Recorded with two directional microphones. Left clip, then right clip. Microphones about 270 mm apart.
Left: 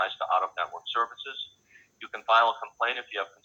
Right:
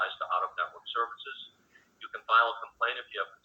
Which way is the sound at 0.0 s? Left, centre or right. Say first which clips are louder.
Left 4 dB; left.